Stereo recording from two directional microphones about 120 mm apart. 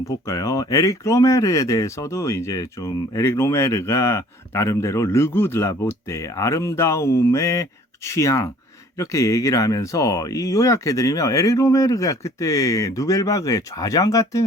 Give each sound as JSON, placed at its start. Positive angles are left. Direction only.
{"t": 0.0, "sound": "speech", "side_deg": 25}